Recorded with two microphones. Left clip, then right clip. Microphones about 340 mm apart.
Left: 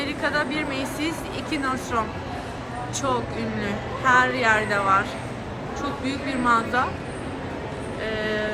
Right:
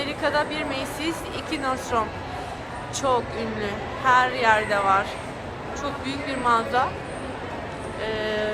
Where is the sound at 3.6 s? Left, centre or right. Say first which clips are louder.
Left 1 dB; centre.